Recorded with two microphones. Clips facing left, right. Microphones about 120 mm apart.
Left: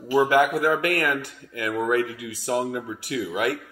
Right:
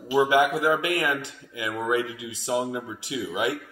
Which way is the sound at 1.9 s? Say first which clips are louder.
Left 2 dB; 15° right (ahead or behind).